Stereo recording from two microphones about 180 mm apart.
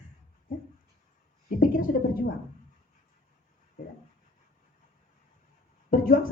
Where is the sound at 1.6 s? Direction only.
55° left (ahead or behind).